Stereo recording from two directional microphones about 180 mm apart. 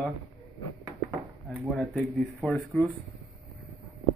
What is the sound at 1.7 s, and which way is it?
A man's voice, centre (ahead or behind).